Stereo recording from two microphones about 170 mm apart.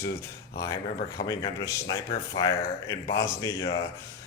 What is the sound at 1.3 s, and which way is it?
Speech, 20° left (ahead or behind).